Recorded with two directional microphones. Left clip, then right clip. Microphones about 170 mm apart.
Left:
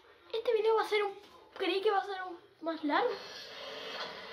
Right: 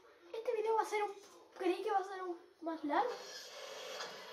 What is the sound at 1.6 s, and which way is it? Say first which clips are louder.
A woman's voice: left 5 dB; 35° left (ahead or behind).